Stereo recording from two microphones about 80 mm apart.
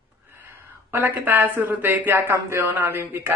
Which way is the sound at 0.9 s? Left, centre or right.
Right.